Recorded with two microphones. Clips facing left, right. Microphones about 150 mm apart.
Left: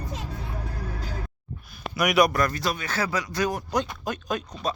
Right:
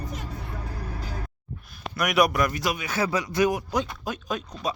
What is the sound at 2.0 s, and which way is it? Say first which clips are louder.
Speech: left 1 dB; centre (ahead or behind).